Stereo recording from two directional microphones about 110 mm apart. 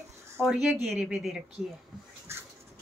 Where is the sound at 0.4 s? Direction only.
5° right (ahead or behind).